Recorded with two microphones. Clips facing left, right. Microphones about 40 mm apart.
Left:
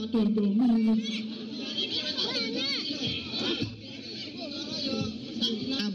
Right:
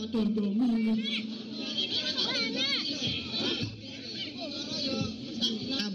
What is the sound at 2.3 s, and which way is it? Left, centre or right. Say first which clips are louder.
Music: even; centre.